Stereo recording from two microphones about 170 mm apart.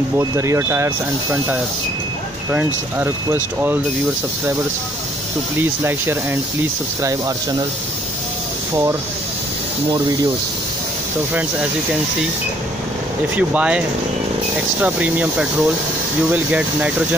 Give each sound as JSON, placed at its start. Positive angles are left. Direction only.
{"t": 0.2, "sound": "speech", "side_deg": -15}
{"t": 5.6, "sound": "speech", "side_deg": -15}
{"t": 13.4, "sound": "speech", "side_deg": -10}